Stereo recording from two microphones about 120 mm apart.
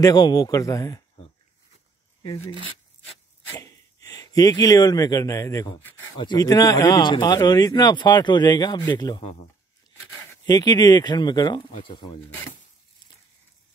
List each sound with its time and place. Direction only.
0.0 s a man's voice: 35° left (ahead or behind)
3.5 s speech: 30° left (ahead or behind)
10.4 s speech: 35° left (ahead or behind)